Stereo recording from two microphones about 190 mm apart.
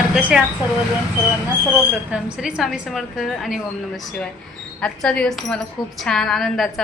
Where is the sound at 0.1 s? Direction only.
5° right (ahead or behind).